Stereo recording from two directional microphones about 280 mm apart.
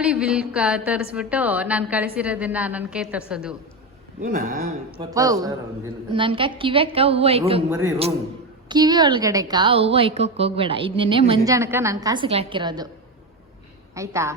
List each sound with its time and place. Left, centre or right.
0.0 s a woman's voice: centre
4.2 s a woman's voice: right
4.9 s a woman's voice: centre
8.7 s a woman's voice: centre
13.9 s a woman's voice: centre